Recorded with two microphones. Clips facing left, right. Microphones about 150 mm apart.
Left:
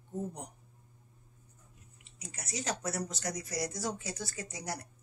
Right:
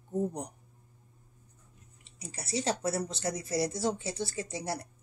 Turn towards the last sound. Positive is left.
turn(degrees=-30)  # may be behind; listen again after turning